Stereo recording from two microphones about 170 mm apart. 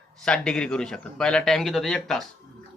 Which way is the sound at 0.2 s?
5° left (ahead or behind).